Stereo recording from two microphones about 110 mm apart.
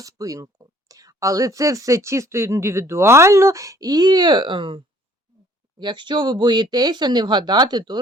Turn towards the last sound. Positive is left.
turn(degrees=-40)  # may be behind; listen again after turning